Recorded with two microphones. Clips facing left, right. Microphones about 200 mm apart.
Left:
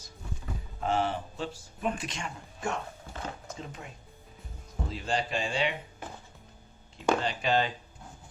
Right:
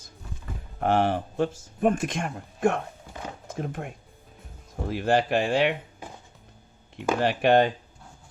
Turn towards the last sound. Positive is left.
turn(degrees=-60)  # may be behind; listen again after turning